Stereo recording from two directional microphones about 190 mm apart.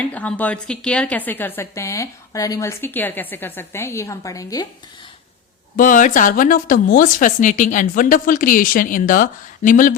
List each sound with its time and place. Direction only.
0.0 s a woman's voice: 5° left (ahead or behind)
5.7 s speech: 45° left (ahead or behind)